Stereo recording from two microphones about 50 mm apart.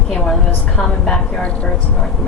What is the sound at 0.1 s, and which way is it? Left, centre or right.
A woman's voice, centre.